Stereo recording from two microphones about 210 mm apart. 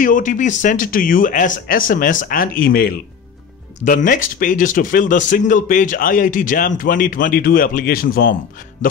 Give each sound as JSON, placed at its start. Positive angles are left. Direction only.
{"t": 0.0, "sound": "speech", "side_deg": 40}